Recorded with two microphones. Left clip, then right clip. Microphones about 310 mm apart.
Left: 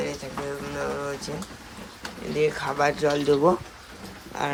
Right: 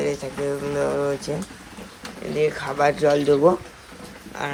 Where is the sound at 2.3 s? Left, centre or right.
Centre.